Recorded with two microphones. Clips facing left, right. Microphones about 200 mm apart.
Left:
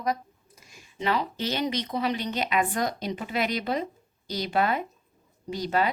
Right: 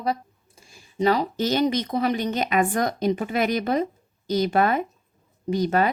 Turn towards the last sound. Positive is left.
turn(degrees=-50)  # may be behind; listen again after turning